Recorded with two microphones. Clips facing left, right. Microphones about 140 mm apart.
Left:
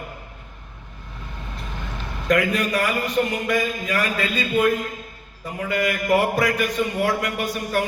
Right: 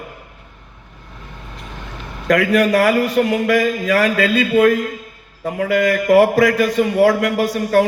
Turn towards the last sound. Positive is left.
turn(degrees=-90)